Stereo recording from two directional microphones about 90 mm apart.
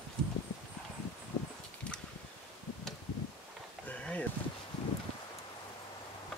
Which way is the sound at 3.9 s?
15° left (ahead or behind).